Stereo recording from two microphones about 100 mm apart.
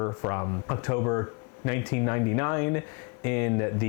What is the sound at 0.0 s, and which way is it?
Speech, 35° left (ahead or behind).